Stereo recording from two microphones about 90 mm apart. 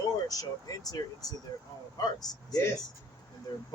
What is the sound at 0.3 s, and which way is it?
Speech, 40° left (ahead or behind).